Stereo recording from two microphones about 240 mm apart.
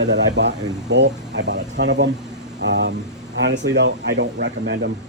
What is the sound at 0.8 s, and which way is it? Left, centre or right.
Speech, right.